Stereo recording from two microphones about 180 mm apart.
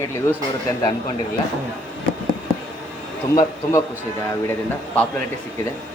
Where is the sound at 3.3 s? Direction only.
15° left (ahead or behind).